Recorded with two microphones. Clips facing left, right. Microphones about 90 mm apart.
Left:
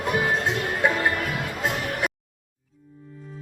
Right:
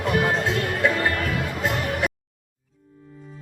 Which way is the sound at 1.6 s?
Centre (ahead or behind).